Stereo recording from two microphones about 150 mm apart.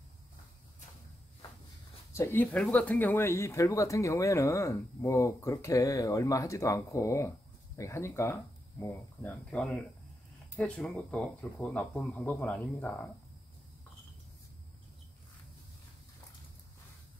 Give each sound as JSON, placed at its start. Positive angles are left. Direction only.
{"t": 2.1, "sound": "speech", "side_deg": 15}